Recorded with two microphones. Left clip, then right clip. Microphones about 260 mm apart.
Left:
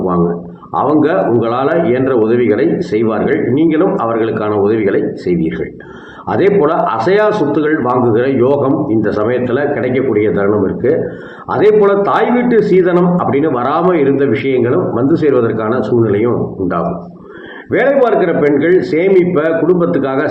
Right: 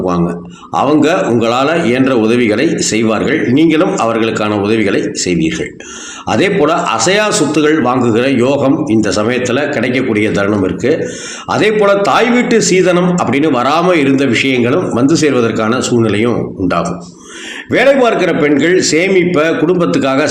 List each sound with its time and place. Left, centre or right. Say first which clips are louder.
0.7 s a man's voice: right 1 dB; right